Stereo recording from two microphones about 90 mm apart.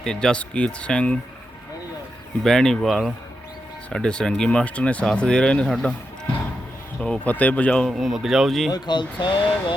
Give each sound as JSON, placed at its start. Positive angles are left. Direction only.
{"t": 0.0, "sound": "speech", "side_deg": 5}
{"t": 2.4, "sound": "speech", "side_deg": 5}
{"t": 7.0, "sound": "speech", "side_deg": 15}
{"t": 7.9, "sound": "speech", "side_deg": -5}
{"t": 8.7, "sound": "speech", "side_deg": 60}